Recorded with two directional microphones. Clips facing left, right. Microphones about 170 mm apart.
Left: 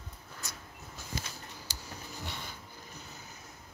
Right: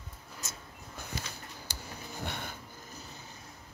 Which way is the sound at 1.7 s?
55° right (ahead or behind).